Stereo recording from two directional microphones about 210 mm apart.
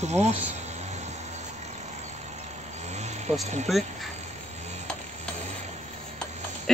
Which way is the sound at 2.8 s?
30° right (ahead or behind).